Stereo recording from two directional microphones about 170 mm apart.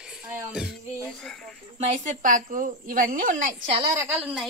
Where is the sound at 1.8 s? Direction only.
50° right (ahead or behind).